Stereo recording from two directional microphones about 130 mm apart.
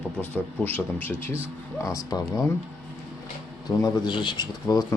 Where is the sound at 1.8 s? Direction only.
25° left (ahead or behind).